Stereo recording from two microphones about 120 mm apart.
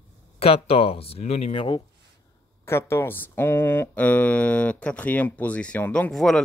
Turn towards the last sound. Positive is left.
turn(degrees=5)  # may be behind; listen again after turning